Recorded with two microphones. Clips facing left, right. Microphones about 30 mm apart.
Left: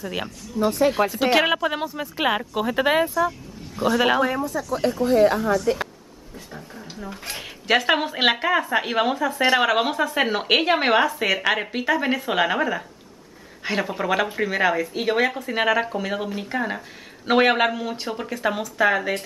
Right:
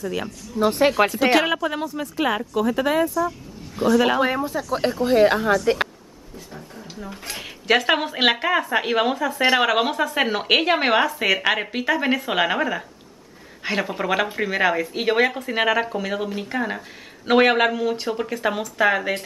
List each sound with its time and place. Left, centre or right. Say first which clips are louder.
0.0 s speech: right 2 dB; centre
0.7 s speech: right 2 dB; right
1.3 s speech: even; centre; by 3.3 s left
3.8 s speech: right 1 dB; centre
4.2 s speech: right 1 dB; right
6.5 s speech: even; centre